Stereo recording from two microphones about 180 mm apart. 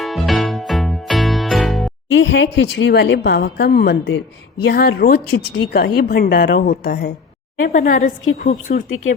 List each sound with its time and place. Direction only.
0.0 s music: centre (ahead or behind)
2.0 s speech: 90° left
4.6 s a woman's voice: 60° left (ahead or behind)